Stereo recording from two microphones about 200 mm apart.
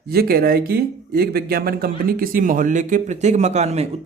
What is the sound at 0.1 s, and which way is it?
Speech, 50° right (ahead or behind).